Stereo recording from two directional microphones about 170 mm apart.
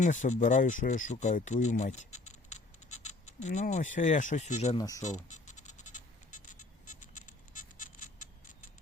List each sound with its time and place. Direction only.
0.0 s speech: 45° left (ahead or behind)
4.8 s speech: 20° left (ahead or behind)
5.0 s music: 45° left (ahead or behind)